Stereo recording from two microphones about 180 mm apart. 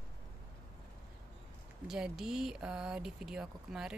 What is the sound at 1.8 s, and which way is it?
Speech, 5° right (ahead or behind).